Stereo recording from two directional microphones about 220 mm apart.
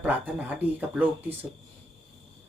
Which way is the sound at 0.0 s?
10° right (ahead or behind).